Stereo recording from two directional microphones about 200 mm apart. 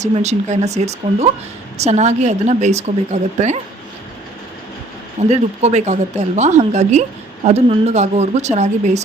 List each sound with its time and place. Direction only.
0.0 s a woman's voice: 35° right (ahead or behind)
5.3 s a woman's voice: 35° right (ahead or behind)